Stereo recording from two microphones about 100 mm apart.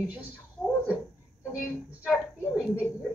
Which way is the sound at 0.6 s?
10° left (ahead or behind).